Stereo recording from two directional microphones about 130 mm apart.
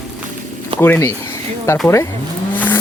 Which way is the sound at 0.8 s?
15° left (ahead or behind).